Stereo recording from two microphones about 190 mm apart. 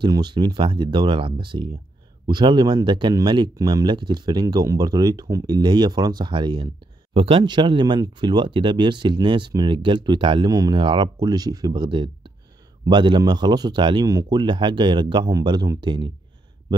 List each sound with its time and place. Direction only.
0.0 s speech: 25° right (ahead or behind)